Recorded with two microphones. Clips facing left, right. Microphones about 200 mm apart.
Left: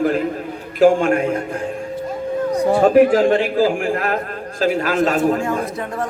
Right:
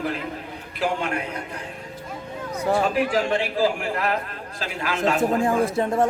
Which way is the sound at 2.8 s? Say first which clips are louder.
Left 10 dB; 50° left (ahead or behind).